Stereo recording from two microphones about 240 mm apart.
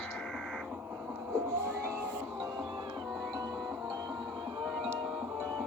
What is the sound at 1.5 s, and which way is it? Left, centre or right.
Music, centre.